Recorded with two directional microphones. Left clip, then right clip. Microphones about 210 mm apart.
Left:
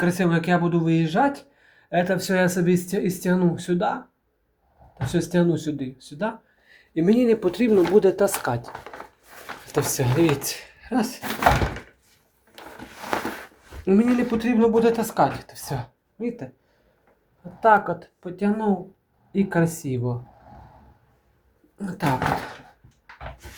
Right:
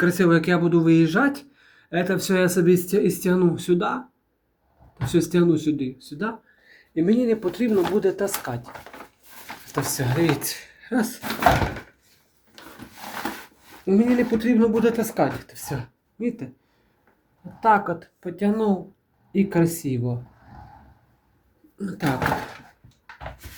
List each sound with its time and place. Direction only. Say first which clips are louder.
0.0 s speech: right 4 dB; centre (ahead or behind)
5.0 s speech: right 2 dB; centre (ahead or behind); by 8.7 s 20° left (ahead or behind)
9.7 s speech: left 3 dB; 15° left (ahead or behind)
13.8 s speech: even; 15° left (ahead or behind)
17.6 s speech: left 1 dB; centre (ahead or behind)
21.8 s speech: right 1 dB; 20° left (ahead or behind)